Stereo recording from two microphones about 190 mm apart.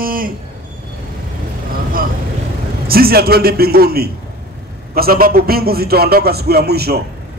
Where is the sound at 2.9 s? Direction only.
55° right (ahead or behind).